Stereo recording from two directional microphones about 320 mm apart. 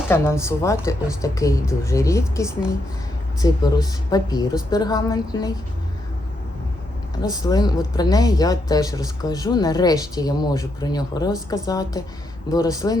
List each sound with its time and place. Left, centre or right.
0.1 s speech: centre
7.2 s speech: centre